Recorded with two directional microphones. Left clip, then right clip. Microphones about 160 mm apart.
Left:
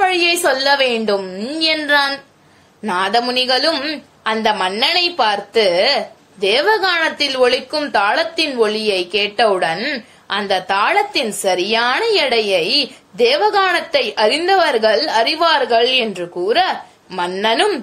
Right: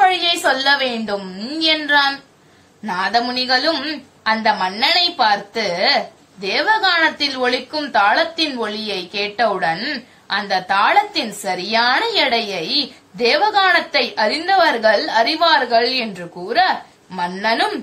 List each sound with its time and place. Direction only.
0.0 s a woman's voice: 35° left (ahead or behind)